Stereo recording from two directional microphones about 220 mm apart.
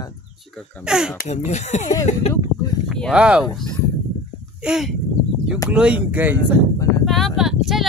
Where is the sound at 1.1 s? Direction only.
30° left (ahead or behind).